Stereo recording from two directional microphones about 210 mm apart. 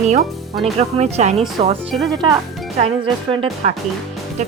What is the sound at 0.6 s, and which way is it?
Speech, 30° right (ahead or behind).